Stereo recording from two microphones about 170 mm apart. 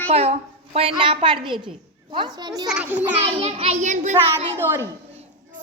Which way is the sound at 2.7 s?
5° right (ahead or behind).